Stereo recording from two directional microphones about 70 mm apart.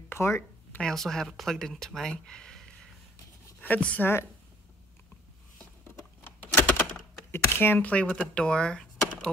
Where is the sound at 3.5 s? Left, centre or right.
Centre.